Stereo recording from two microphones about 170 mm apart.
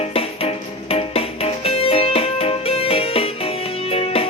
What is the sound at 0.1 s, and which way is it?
Music, 35° left (ahead or behind).